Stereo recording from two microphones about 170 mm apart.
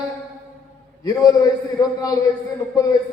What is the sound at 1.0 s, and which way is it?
A man's voice, 20° left (ahead or behind).